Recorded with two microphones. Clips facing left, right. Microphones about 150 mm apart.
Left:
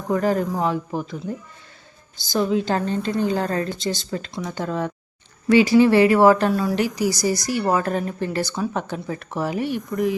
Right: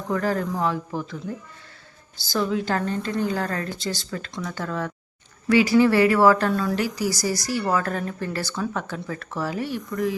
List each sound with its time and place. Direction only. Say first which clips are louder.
0.1 s speech: left 4 dB; 20° left (ahead or behind)